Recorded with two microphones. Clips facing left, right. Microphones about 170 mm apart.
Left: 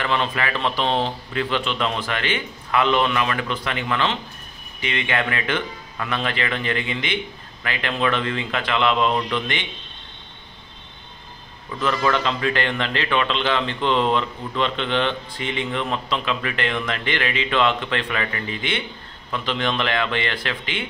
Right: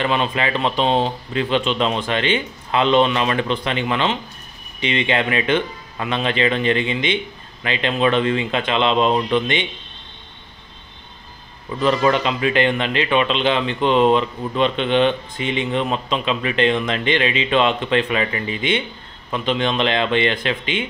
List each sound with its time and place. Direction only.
0.0 s speech: 20° right (ahead or behind)
11.8 s speech: 20° right (ahead or behind)